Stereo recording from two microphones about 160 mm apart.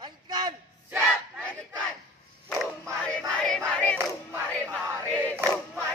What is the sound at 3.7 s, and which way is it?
Crowd, 10° left (ahead or behind).